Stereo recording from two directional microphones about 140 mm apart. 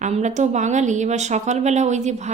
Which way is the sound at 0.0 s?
55° right (ahead or behind).